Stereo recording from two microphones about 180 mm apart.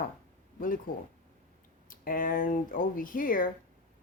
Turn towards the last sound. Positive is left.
turn(degrees=50)  # may be behind; listen again after turning